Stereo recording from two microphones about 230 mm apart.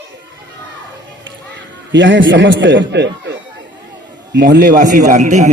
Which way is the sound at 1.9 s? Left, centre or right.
Right.